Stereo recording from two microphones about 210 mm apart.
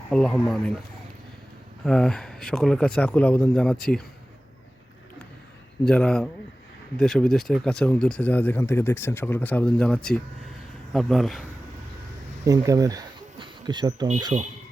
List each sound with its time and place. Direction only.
0.1 s speech: 5° left (ahead or behind)
1.8 s speech: 5° left (ahead or behind)
5.8 s speech: 5° left (ahead or behind)
12.5 s speech: 15° right (ahead or behind)
14.3 s speech: 30° right (ahead or behind)